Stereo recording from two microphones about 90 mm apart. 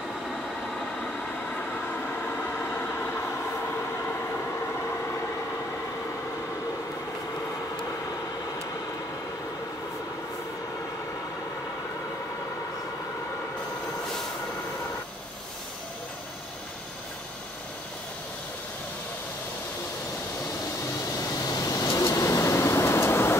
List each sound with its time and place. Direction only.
0.3 s vehicle: 5° left (ahead or behind); by 3.3 s 25° left (ahead or behind)
3.7 s train: 20° left (ahead or behind)
21.5 s vehicle: 40° left (ahead or behind)